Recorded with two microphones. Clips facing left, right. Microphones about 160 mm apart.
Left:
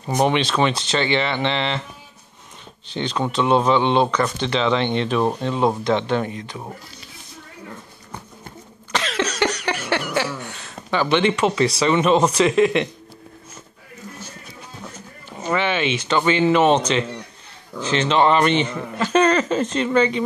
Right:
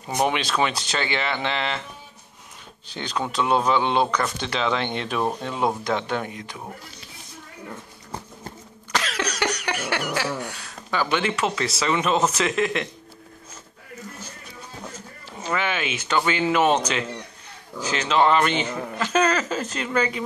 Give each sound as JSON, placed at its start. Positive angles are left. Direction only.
{"t": 0.2, "sound": "speech", "side_deg": -5}
{"t": 2.9, "sound": "speech", "side_deg": -10}
{"t": 9.1, "sound": "a sound", "side_deg": -10}
{"t": 11.8, "sound": "speech", "side_deg": 0}
{"t": 15.4, "sound": "speech", "side_deg": -5}